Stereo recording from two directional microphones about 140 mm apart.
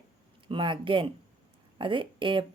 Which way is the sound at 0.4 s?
35° right (ahead or behind).